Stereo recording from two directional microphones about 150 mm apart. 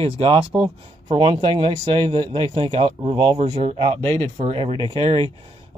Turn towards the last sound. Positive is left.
turn(degrees=-35)  # may be behind; listen again after turning